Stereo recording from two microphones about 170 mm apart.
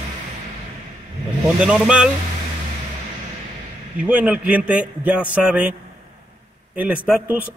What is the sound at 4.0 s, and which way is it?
A man's voice, 10° right (ahead or behind).